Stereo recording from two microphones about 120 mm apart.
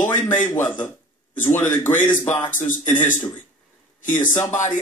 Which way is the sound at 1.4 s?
15° left (ahead or behind).